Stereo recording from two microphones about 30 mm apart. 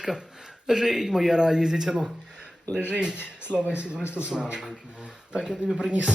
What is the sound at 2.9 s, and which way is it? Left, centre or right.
Speech, right.